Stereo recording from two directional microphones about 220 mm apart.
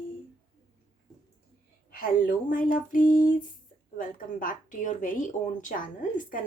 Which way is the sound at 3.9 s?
40° left (ahead or behind).